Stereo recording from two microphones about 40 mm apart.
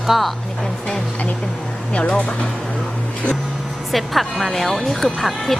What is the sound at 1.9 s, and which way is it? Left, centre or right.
Speech, left.